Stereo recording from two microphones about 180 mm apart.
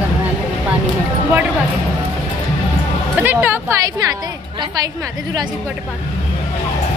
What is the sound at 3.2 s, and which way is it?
Speech, 10° right (ahead or behind).